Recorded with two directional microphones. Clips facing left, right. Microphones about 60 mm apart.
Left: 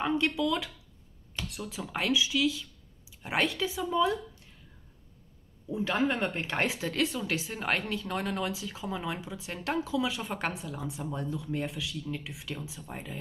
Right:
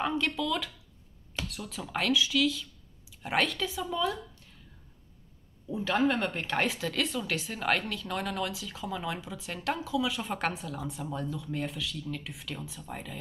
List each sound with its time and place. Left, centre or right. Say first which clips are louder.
0.0 s speech: left 2 dB; left
5.7 s speech: right 1 dB; centre; by 10.2 s left
10.2 s speech: right 1 dB; centre
11.2 s speech: left 1 dB; left